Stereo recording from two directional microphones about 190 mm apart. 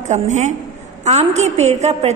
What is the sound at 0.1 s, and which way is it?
A woman's voice, 40° right (ahead or behind).